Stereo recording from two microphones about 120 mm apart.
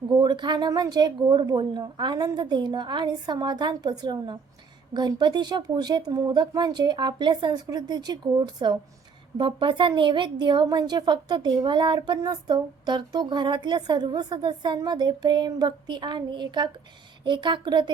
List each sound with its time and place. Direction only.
0.1 s a woman's voice: 35° right (ahead or behind)